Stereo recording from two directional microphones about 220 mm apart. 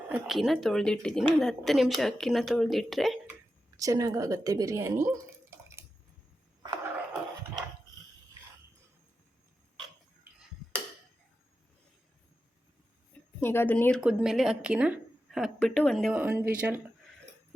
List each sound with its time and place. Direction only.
0.1 s speech: centre (ahead or behind)
3.8 s speech: 15° right (ahead or behind)
6.6 s a sound: 20° right (ahead or behind)
13.4 s speech: 10° left (ahead or behind)
14.0 s speech: 5° right (ahead or behind)